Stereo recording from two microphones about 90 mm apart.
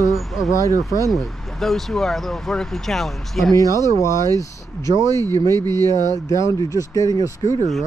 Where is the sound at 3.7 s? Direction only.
35° left (ahead or behind).